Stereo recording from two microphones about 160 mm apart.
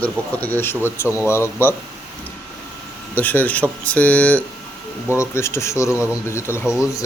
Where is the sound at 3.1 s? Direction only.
10° left (ahead or behind).